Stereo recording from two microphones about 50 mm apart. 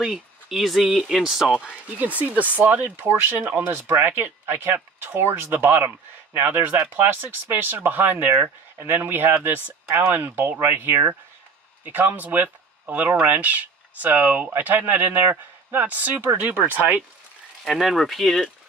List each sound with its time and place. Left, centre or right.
0.0 s speech: centre
1.2 s speech: centre
2.0 s speech: right
7.5 s speech: right
17.6 s speech: centre